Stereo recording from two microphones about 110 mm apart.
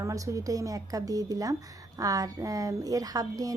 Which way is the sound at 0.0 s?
30° right (ahead or behind).